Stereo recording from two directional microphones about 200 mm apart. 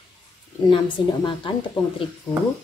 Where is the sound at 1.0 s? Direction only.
25° left (ahead or behind).